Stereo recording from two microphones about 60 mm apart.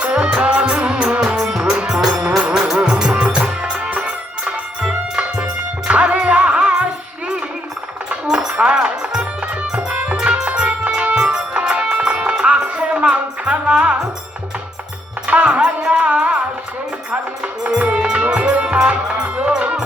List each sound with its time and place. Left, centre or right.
0.0 s music: centre
1.2 s music: centre
8.1 s music: centre
15.3 s music: right